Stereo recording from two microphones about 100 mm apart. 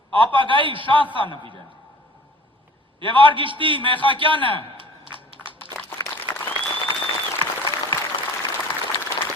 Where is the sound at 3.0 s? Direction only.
55° right (ahead or behind).